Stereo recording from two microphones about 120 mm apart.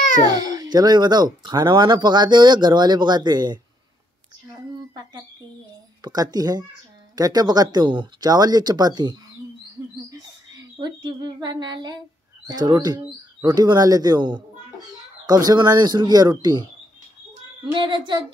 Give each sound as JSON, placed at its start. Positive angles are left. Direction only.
{"t": 0.3, "sound": "speech", "side_deg": -30}
{"t": 6.0, "sound": "speech", "side_deg": -35}
{"t": 10.1, "sound": "a sound", "side_deg": -30}
{"t": 12.4, "sound": "speech", "side_deg": -35}
{"t": 17.7, "sound": "speech", "side_deg": -40}